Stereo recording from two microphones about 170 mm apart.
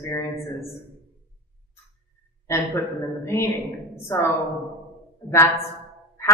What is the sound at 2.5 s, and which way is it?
A woman's voice, 15° left (ahead or behind).